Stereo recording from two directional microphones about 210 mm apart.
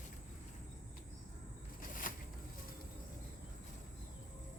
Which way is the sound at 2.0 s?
40° left (ahead or behind).